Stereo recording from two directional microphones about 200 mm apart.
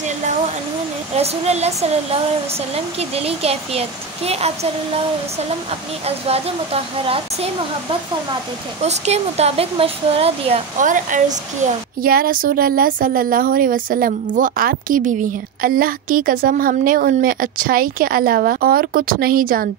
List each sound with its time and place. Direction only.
1.1 s speech: 30° right (ahead or behind)
6.0 s speech: 30° right (ahead or behind)
8.8 s a woman's voice: 35° right (ahead or behind)